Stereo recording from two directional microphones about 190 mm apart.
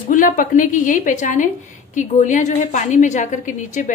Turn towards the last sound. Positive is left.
turn(degrees=40)  # may be behind; listen again after turning